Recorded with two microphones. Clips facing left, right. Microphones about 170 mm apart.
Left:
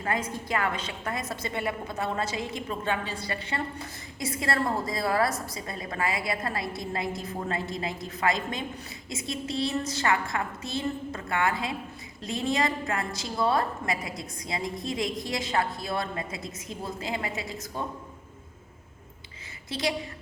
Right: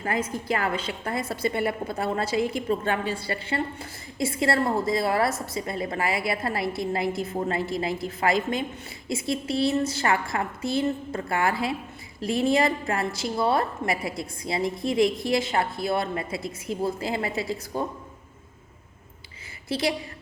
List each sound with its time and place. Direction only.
0.0 s a woman's voice: 25° right (ahead or behind)
19.6 s a woman's voice: 30° right (ahead or behind)